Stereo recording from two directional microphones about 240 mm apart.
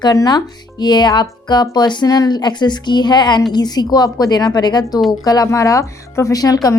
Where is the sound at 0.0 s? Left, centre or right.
Centre.